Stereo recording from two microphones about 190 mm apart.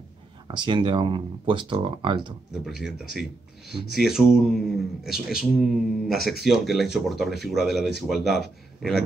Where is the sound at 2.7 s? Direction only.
Centre (ahead or behind).